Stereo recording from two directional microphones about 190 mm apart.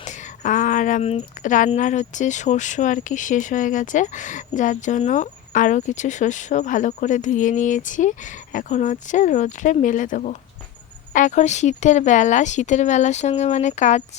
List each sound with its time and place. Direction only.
0.0 s speech: 40° left (ahead or behind)